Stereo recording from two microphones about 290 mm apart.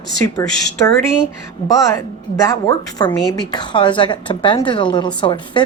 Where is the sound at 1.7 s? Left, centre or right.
Centre.